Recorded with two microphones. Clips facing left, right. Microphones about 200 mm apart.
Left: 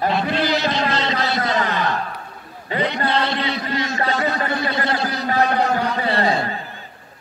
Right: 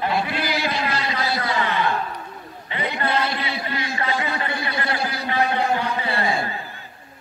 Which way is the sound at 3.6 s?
45° left (ahead or behind).